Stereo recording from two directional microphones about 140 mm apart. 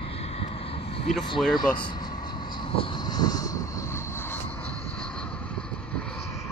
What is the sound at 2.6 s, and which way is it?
Vehicle, 40° left (ahead or behind).